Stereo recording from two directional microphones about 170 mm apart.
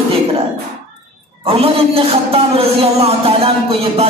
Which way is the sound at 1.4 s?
35° right (ahead or behind).